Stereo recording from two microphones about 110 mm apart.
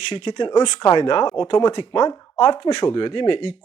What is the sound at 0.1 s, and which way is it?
Speech, 45° left (ahead or behind).